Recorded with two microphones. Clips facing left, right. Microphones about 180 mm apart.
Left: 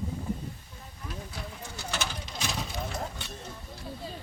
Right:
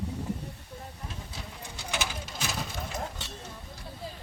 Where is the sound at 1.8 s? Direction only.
10° right (ahead or behind).